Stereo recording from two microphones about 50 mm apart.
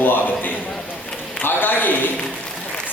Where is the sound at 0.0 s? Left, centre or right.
Left.